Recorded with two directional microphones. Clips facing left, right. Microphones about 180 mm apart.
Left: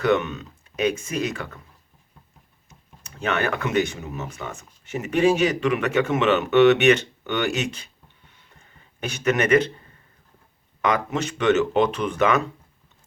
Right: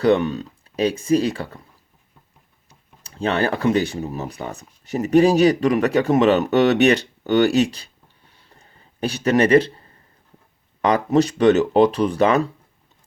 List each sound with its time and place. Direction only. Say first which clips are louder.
0.0 s speech: right 4 dB; 35° right (ahead or behind)
2.6 s speech: left 1 dB; 30° right (ahead or behind)
8.4 s a sound: right 4 dB; 35° right (ahead or behind)
10.8 s speech: right 7 dB; 35° right (ahead or behind)